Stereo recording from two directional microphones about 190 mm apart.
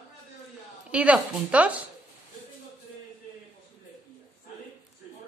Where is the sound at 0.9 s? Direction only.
5° right (ahead or behind).